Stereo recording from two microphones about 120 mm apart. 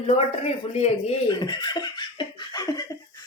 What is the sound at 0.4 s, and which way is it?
Speech, 65° left (ahead or behind).